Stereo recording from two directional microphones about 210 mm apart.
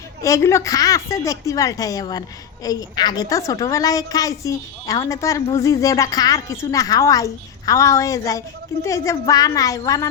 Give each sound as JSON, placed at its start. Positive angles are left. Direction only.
{"t": 0.2, "sound": "a woman's voice", "side_deg": 15}